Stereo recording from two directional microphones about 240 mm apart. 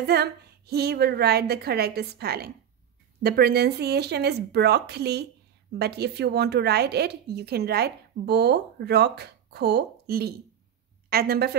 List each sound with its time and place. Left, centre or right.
0.0 s a woman's voice: right